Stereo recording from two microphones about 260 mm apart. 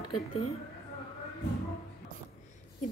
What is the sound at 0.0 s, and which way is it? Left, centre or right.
Speech, left.